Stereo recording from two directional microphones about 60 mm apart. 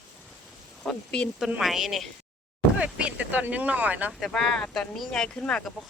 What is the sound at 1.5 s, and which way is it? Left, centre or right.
Speech, centre.